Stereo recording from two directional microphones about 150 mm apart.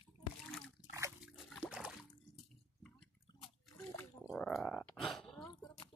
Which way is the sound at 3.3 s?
30° left (ahead or behind).